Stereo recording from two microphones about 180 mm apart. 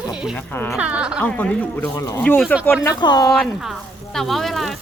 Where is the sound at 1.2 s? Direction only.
10° left (ahead or behind).